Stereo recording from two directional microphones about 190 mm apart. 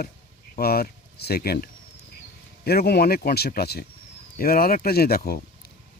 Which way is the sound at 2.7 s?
55° left (ahead or behind).